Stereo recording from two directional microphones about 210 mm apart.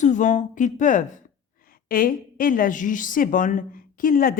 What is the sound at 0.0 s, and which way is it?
A woman's voice, 35° left (ahead or behind).